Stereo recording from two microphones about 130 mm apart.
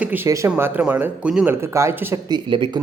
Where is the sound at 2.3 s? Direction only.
35° right (ahead or behind).